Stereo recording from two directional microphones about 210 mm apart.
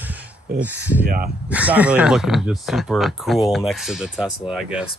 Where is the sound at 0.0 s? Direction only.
5° right (ahead or behind).